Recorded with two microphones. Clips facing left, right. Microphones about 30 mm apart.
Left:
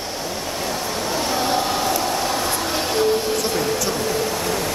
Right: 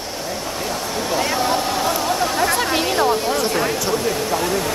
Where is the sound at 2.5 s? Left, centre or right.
Right.